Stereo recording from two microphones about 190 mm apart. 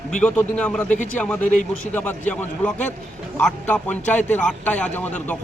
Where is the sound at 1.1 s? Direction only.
5° left (ahead or behind).